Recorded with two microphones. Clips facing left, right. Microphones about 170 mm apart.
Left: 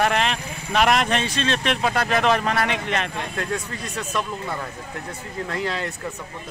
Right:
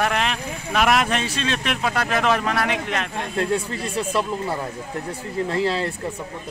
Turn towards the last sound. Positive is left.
turn(degrees=-30)  # may be behind; listen again after turning